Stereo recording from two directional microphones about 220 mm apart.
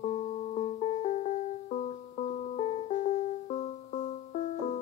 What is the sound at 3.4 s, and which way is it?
Music, 30° left (ahead or behind).